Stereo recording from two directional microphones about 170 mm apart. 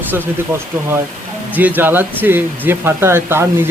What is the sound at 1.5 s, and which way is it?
Speech, 10° right (ahead or behind).